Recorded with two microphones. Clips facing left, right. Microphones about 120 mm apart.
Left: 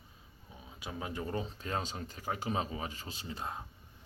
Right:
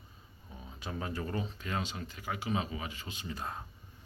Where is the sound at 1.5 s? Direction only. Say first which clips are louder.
Even; 35° left (ahead or behind).